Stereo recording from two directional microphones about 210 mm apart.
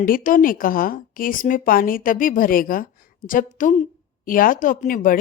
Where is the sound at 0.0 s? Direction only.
40° left (ahead or behind).